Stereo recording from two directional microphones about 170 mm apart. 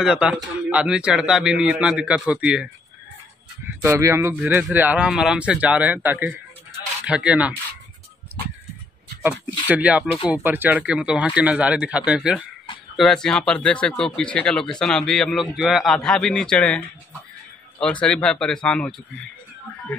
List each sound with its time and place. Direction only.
0.0 s speech: 5° right (ahead or behind)
9.2 s speech: 10° right (ahead or behind)
18.0 s speech: 5° left (ahead or behind)